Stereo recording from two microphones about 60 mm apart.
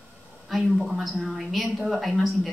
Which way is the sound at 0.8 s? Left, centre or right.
Centre.